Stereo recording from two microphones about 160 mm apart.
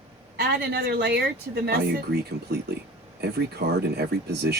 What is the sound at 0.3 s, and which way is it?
Speech, 80° right.